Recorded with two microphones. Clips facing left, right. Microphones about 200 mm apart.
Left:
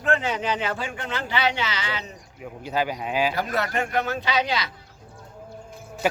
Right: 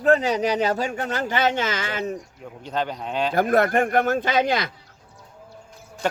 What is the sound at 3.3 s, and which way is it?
Speech, 50° right (ahead or behind).